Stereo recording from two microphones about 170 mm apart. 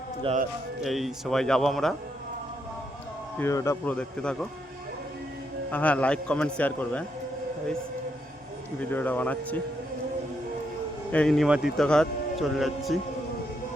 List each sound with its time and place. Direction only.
0.3 s speech: 35° right (ahead or behind)
0.8 s a man's voice: centre (ahead or behind)
3.3 s a man's voice: 15° left (ahead or behind)
3.9 s a man's voice: 5° left (ahead or behind)
5.7 s a man's voice: 10° left (ahead or behind)
8.8 s a man's voice: 10° left (ahead or behind)
11.1 s a man's voice: 5° left (ahead or behind)